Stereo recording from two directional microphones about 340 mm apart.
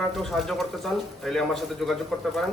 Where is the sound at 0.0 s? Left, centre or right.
Centre.